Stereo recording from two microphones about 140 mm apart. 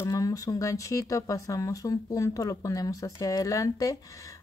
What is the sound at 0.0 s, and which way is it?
Speech, 25° left (ahead or behind).